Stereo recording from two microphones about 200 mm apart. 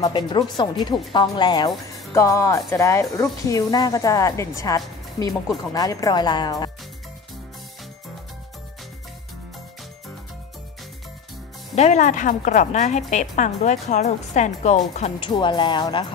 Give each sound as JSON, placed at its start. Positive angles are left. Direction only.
{"t": 0.0, "sound": "speech", "side_deg": 20}
{"t": 11.7, "sound": "a woman's voice", "side_deg": 35}